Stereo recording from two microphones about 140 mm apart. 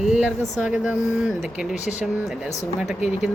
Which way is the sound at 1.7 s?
55° left (ahead or behind).